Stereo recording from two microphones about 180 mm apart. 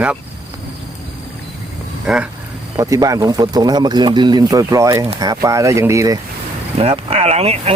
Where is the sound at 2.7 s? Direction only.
20° right (ahead or behind).